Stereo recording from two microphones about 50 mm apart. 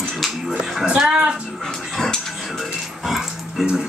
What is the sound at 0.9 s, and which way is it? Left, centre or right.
Music, centre.